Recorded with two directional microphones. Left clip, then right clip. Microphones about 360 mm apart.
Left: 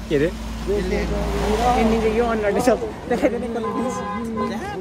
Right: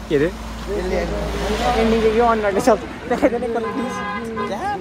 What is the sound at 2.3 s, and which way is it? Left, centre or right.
Speech, centre.